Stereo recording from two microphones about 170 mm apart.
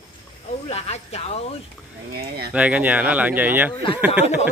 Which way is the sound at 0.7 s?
40° left (ahead or behind).